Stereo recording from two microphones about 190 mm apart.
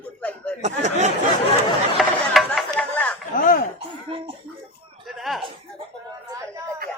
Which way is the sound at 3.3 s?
45° left (ahead or behind).